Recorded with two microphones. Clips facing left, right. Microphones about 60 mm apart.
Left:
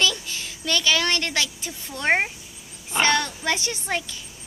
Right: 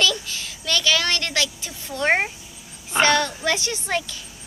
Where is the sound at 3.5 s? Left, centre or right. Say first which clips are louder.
Right 2 dB; centre.